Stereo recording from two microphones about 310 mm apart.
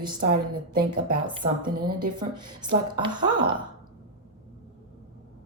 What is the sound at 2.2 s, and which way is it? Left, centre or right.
Speech, centre.